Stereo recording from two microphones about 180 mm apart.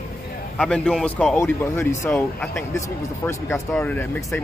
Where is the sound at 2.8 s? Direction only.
15° left (ahead or behind).